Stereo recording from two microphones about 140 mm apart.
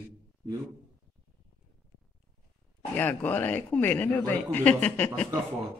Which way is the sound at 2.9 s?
10° left (ahead or behind).